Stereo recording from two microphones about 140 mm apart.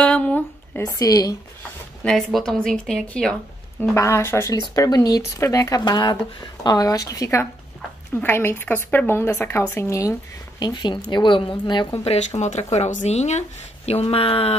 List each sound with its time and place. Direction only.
0.0 s a sound: 10° left (ahead or behind)
0.8 s speech: 25° left (ahead or behind)
2.0 s speech: 5° left (ahead or behind)
3.9 s a woman's voice: 20° left (ahead or behind)
10.6 s speech: 30° left (ahead or behind)
12.0 s speech: 50° left (ahead or behind)